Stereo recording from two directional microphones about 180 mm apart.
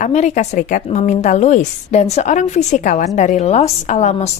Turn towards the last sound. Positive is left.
turn(degrees=40)  # may be behind; listen again after turning